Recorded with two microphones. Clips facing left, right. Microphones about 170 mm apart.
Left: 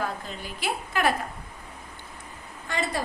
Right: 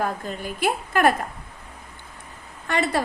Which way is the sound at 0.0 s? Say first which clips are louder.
Right 5 dB; 50° right (ahead or behind).